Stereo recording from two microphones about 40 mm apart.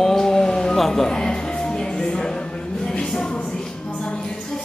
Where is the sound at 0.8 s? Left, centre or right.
Centre.